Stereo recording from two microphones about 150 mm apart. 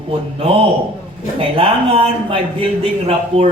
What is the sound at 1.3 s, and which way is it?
Speech, 40° right (ahead or behind).